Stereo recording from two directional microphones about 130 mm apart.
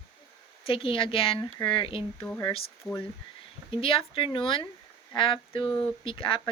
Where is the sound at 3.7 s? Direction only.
45° left (ahead or behind).